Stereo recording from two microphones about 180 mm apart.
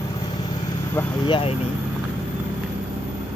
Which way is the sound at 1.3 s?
30° left (ahead or behind).